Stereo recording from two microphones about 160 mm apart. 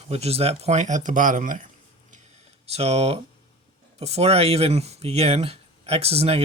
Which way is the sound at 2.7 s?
40° right (ahead or behind).